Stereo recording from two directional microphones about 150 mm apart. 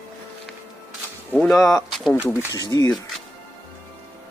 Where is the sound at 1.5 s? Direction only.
20° left (ahead or behind).